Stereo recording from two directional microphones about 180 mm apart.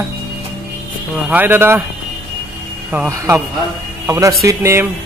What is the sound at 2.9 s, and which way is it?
Speech, 15° right (ahead or behind).